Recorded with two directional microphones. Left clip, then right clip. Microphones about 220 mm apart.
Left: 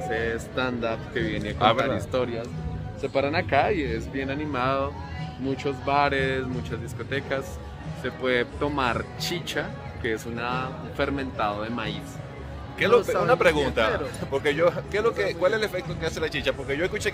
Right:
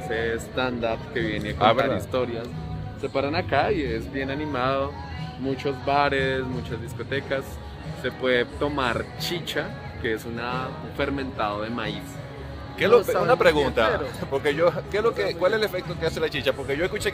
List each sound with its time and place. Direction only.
0.1 s speech: 5° right (ahead or behind)
12.7 s a man's voice: 25° right (ahead or behind)